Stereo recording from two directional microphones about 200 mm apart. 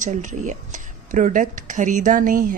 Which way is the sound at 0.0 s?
40° right (ahead or behind).